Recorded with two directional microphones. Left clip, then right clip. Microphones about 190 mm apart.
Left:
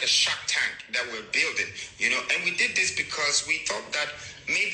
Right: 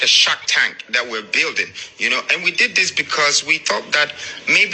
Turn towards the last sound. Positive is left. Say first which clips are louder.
# right 12 dB
turn(degrees=-35)  # may be behind; listen again after turning